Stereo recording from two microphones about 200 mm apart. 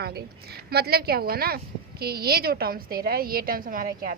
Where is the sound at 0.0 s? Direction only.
50° right (ahead or behind).